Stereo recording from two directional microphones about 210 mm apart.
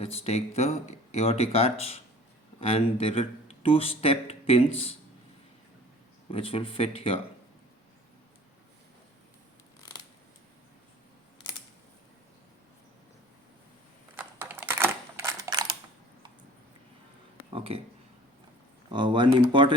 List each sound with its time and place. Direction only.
0.0 s speech: 30° left (ahead or behind)
6.3 s speech: 25° left (ahead or behind)
14.2 s typing: 10° right (ahead or behind)
17.5 s a sound: 25° right (ahead or behind)
18.9 s speech: 20° right (ahead or behind)